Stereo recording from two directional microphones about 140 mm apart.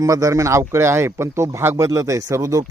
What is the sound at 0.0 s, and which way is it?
A man's voice, 25° right (ahead or behind).